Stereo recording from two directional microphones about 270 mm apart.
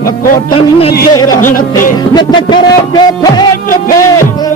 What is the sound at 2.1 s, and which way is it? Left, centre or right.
Music, centre.